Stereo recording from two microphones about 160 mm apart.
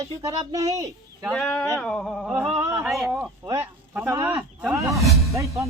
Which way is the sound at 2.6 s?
20° right (ahead or behind).